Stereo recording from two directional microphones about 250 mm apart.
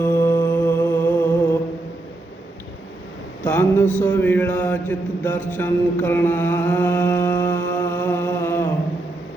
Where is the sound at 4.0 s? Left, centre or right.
Centre.